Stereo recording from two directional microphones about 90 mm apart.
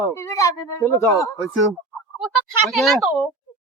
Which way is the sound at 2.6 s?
Centre (ahead or behind).